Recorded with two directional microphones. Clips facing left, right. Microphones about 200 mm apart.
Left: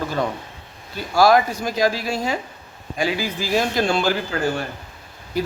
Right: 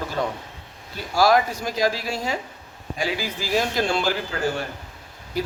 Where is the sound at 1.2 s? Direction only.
55° left (ahead or behind).